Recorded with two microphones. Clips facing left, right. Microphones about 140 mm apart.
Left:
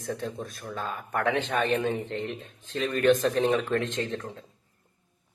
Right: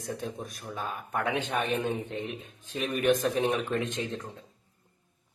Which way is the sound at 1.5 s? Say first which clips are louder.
Left 2 dB; 70° left (ahead or behind).